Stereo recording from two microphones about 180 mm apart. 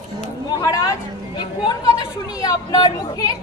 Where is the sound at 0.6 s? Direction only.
20° left (ahead or behind).